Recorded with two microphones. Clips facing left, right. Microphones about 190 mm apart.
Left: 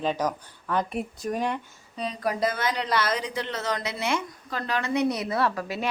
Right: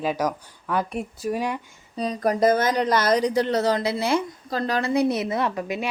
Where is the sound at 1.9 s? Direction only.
40° right (ahead or behind).